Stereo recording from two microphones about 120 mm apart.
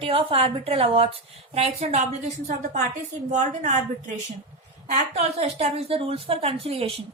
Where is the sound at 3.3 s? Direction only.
80° right.